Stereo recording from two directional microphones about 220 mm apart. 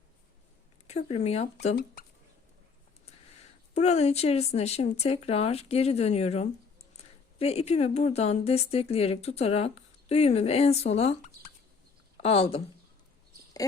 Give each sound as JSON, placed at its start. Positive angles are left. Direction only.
{"t": 0.9, "sound": "speech", "side_deg": 30}
{"t": 1.6, "sound": "speech", "side_deg": 40}
{"t": 3.8, "sound": "speech", "side_deg": 30}
{"t": 12.2, "sound": "speech", "side_deg": 25}